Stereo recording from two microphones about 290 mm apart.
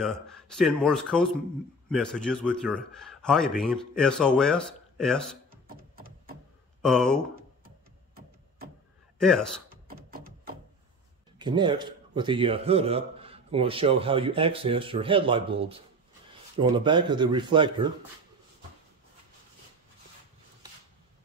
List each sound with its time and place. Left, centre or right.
0.0 s a man's voice: centre
9.2 s speech: centre
9.7 s a sound: right
11.3 s a man's voice: centre